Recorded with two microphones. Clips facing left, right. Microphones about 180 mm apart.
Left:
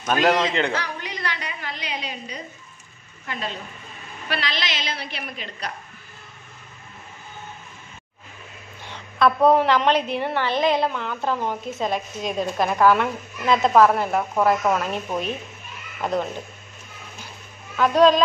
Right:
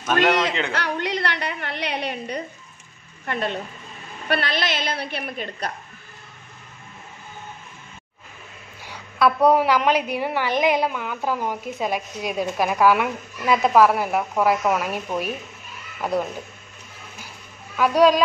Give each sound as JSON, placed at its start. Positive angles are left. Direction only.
{"t": 0.0, "sound": "a man's voice", "side_deg": 0}
{"t": 0.7, "sound": "a woman's voice", "side_deg": -70}
{"t": 8.8, "sound": "a woman's voice", "side_deg": -10}
{"t": 17.7, "sound": "a woman's voice", "side_deg": -10}